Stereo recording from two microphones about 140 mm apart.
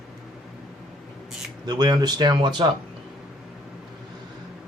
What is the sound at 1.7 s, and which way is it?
Speech, 30° right (ahead or behind).